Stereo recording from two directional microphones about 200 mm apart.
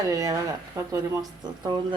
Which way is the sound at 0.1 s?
15° right (ahead or behind).